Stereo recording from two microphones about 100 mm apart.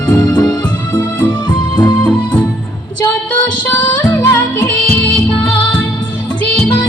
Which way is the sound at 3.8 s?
25° left (ahead or behind).